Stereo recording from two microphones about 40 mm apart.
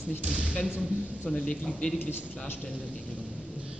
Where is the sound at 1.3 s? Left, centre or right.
Left.